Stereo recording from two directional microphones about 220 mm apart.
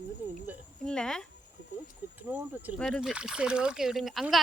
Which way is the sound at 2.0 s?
10° right (ahead or behind).